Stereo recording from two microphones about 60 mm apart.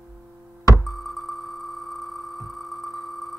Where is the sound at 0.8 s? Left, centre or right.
Centre.